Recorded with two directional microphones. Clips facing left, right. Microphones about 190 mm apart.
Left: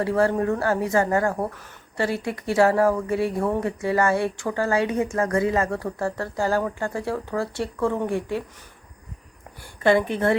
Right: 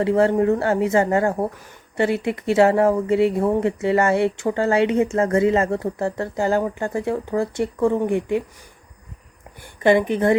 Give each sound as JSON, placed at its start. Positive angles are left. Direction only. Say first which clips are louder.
{"t": 0.0, "sound": "speech", "louder": "right 4 dB", "side_deg": -20}
{"t": 9.8, "sound": "a woman's voice", "louder": "right 3 dB", "side_deg": -15}